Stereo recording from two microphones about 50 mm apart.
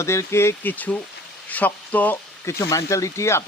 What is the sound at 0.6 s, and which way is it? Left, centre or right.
Speech, left.